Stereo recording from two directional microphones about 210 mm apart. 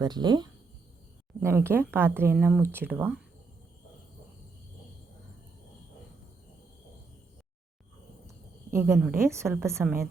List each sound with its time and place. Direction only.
0.0 s speech: 20° right (ahead or behind)
8.7 s a woman's voice: 10° right (ahead or behind)